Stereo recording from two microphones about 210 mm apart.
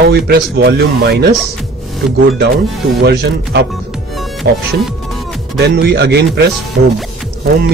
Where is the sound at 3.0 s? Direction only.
50° right (ahead or behind).